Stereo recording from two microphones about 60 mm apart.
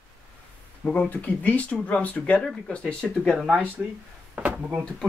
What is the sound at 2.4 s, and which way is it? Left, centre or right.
Speech, centre.